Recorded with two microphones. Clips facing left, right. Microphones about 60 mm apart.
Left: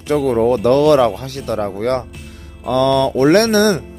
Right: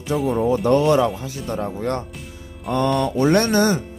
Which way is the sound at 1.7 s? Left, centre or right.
Left.